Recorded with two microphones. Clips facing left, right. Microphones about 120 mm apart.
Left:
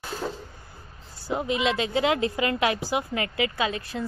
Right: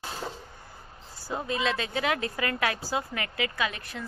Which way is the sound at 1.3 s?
20° left (ahead or behind).